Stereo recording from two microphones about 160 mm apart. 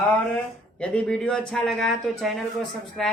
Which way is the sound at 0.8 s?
5° left (ahead or behind).